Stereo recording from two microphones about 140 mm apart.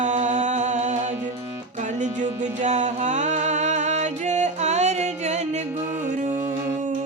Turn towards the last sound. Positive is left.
turn(degrees=-50)  # may be behind; listen again after turning